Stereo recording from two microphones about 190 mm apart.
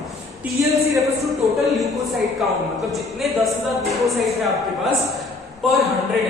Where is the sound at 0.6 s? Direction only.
15° right (ahead or behind).